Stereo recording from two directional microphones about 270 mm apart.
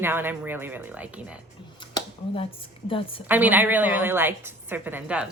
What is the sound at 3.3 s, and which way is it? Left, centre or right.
A woman's voice, centre.